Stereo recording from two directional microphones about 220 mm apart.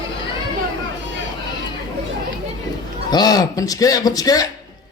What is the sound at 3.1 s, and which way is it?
Speech, 20° left (ahead or behind).